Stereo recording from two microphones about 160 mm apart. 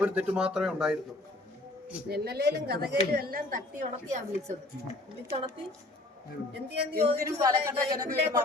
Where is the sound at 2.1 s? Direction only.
85° right.